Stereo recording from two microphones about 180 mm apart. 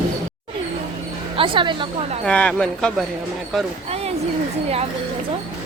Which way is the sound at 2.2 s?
5° left (ahead or behind).